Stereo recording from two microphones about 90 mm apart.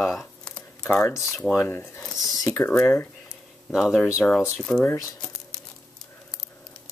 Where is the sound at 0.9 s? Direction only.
25° left (ahead or behind).